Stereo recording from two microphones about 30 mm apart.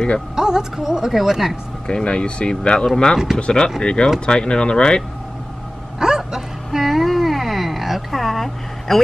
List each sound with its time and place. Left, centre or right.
0.4 s speech: centre
1.9 s speech: left
5.9 s music: centre
6.8 s a sound: centre